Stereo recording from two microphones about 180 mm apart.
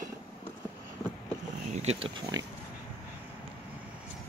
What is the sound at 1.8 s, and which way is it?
Speech, 30° right (ahead or behind).